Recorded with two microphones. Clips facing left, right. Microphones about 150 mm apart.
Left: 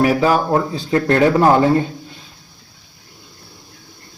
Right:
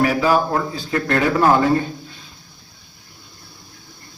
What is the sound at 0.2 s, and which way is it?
Speech, 30° left (ahead or behind).